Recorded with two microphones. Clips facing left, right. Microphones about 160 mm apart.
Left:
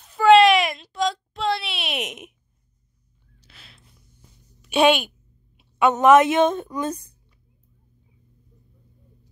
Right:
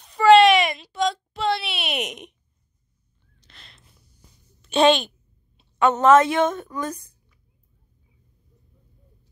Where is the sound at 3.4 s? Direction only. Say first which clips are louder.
Left 1 dB; 10° left (ahead or behind).